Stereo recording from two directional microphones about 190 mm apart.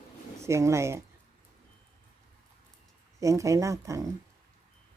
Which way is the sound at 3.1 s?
15° right (ahead or behind).